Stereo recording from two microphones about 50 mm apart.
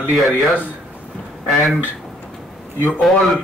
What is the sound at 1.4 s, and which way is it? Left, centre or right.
Speech, centre.